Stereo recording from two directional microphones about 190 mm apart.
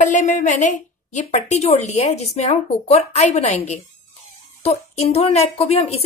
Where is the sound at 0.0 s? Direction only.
40° left (ahead or behind).